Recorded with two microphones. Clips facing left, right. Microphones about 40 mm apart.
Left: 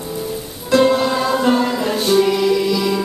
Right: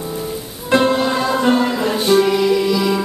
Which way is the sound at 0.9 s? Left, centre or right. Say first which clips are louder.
Even; centre.